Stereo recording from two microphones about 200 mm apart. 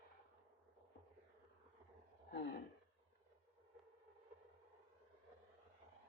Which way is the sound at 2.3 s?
55° left (ahead or behind).